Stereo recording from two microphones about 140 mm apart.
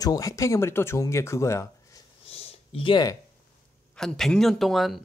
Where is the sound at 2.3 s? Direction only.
45° left (ahead or behind).